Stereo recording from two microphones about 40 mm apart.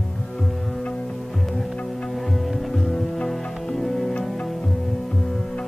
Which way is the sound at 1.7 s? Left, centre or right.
Left.